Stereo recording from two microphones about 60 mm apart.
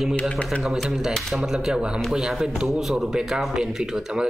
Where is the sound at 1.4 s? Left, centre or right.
Centre.